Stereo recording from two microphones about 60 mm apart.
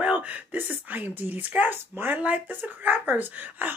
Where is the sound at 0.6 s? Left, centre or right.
Right.